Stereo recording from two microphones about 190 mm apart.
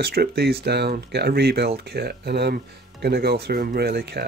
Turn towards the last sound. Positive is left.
turn(degrees=-60)  # may be behind; listen again after turning